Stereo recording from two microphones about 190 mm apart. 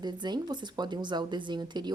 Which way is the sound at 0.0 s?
20° right (ahead or behind).